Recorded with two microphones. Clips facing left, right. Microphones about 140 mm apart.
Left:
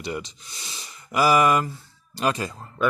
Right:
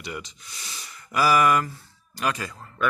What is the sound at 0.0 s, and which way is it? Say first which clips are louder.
Speech: left 5 dB; 30° left (ahead or behind).